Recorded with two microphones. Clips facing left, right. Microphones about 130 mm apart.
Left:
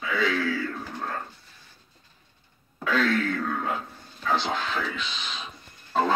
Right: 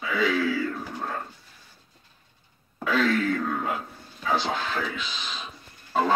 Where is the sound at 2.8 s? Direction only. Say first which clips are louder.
Right 1 dB; 10° right (ahead or behind).